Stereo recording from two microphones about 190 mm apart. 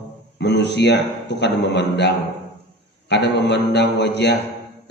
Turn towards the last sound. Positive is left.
turn(degrees=65)  # may be behind; listen again after turning